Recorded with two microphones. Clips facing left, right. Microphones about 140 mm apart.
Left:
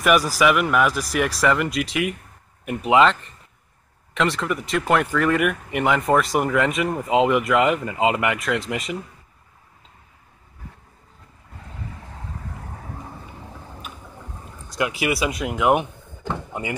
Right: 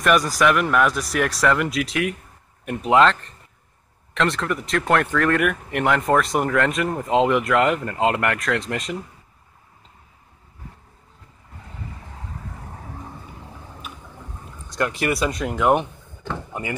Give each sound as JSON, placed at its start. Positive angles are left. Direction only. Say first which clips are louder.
{"t": 0.0, "sound": "speech", "louder": "even", "side_deg": 5}
{"t": 14.7, "sound": "speech", "louder": "even", "side_deg": 5}